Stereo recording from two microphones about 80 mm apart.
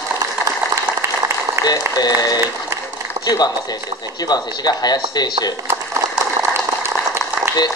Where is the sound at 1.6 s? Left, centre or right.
Left.